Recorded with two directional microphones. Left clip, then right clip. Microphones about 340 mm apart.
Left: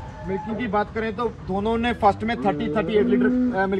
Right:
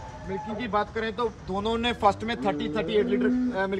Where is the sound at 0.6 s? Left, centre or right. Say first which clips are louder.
Left 3 dB; centre.